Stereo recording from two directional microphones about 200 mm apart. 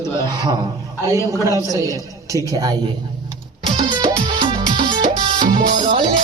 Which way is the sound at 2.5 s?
20° right (ahead or behind).